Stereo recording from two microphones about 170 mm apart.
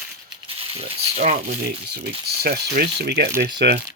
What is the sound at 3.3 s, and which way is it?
Speech, 15° right (ahead or behind).